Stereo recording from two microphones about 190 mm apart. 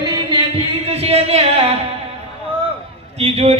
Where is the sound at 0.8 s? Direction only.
35° right (ahead or behind).